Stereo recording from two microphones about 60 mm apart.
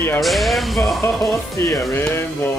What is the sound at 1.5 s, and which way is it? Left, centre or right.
Speech, left.